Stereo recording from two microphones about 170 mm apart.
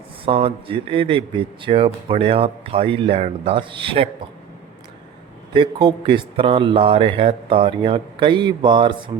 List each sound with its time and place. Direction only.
0.3 s speech: 30° right (ahead or behind)
5.5 s a man's voice: 30° right (ahead or behind)